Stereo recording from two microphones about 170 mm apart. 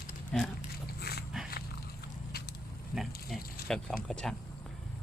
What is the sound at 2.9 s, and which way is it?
Speech, centre (ahead or behind).